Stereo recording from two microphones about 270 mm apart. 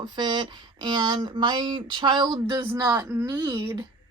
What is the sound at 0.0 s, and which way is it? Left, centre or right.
Speech, centre.